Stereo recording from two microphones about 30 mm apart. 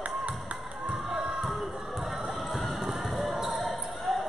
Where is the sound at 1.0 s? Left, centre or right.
Centre.